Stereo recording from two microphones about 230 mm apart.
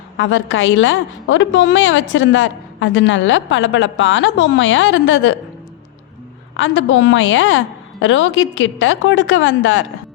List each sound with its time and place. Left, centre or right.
0.2 s a woman's voice: left
6.6 s a woman's voice: left